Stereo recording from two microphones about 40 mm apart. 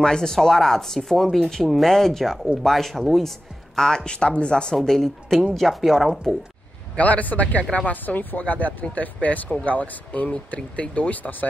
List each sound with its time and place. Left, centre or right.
0.0 s speech: centre
4.8 s a woman's voice: centre
7.0 s speech: left
8.0 s speech: left